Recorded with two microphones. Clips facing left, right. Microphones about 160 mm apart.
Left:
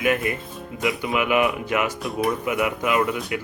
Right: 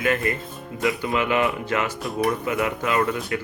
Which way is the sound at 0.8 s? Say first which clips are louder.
Right 1 dB; centre (ahead or behind).